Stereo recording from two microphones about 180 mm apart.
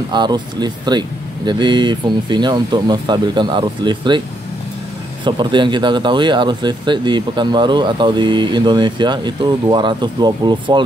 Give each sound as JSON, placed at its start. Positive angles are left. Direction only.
{"t": 0.1, "sound": "speech", "side_deg": -25}
{"t": 5.2, "sound": "speech", "side_deg": -25}